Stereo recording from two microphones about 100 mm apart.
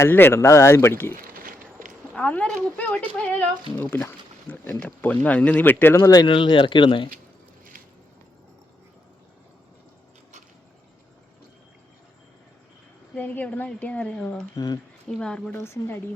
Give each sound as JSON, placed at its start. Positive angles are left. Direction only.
{"t": 0.0, "sound": "speech", "side_deg": 25}
{"t": 2.1, "sound": "speech", "side_deg": 15}
{"t": 3.8, "sound": "a sound", "side_deg": 20}
{"t": 4.7, "sound": "speech", "side_deg": 15}
{"t": 6.2, "sound": "speech", "side_deg": 55}
{"t": 13.1, "sound": "speech", "side_deg": 15}
{"t": 14.5, "sound": "speech", "side_deg": 40}
{"t": 15.1, "sound": "speech", "side_deg": 5}
{"t": 15.5, "sound": "speech", "side_deg": 25}